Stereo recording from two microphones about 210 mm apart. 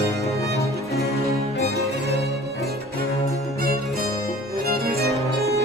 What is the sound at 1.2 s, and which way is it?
Music, 50° right (ahead or behind).